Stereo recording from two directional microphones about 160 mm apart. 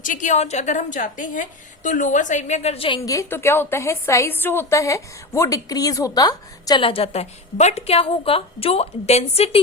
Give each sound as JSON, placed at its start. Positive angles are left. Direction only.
{"t": 0.0, "sound": "a woman's voice", "side_deg": 55}
{"t": 3.1, "sound": "a woman's voice", "side_deg": 15}